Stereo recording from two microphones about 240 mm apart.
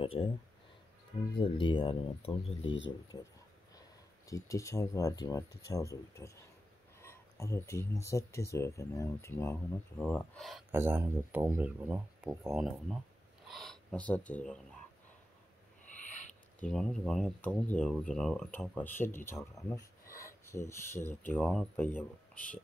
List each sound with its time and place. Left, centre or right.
0.0 s speech: left
1.4 s speech: centre
16.0 s a sound: left
16.7 s speech: centre